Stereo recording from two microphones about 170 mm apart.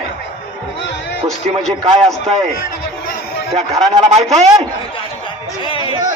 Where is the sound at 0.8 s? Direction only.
90° left.